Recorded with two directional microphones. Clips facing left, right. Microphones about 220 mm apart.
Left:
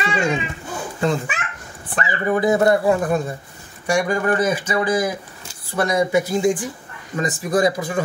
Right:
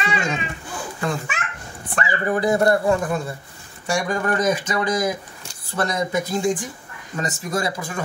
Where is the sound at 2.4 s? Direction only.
20° left (ahead or behind).